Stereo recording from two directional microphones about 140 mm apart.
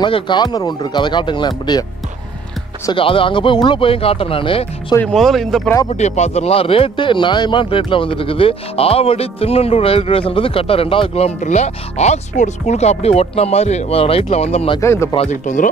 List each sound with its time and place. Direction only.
0.0 s speech: 35° left (ahead or behind)
2.9 s speech: 40° left (ahead or behind)
5.0 s speech: centre (ahead or behind)
5.9 s speech: 55° left (ahead or behind)
14.8 s speech: 20° left (ahead or behind)
15.4 s speech: 65° left (ahead or behind)